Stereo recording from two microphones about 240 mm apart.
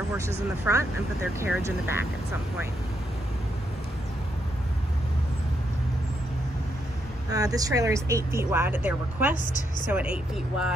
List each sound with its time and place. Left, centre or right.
0.7 s speech: centre
7.2 s speech: centre
9.4 s a woman's voice: left
9.8 s speech: centre